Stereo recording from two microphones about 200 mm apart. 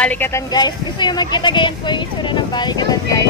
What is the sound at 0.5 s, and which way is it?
Speech, 20° left (ahead or behind).